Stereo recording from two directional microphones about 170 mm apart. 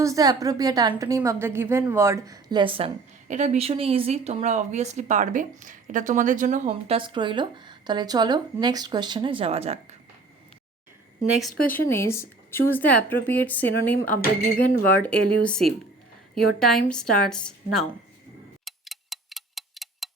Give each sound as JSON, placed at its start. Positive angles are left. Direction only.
{"t": 0.0, "sound": "a woman's voice", "side_deg": -20}
{"t": 3.2, "sound": "a woman's voice", "side_deg": -45}
{"t": 11.8, "sound": "a woman's voice", "side_deg": 15}
{"t": 18.6, "sound": "tick-tock", "side_deg": 0}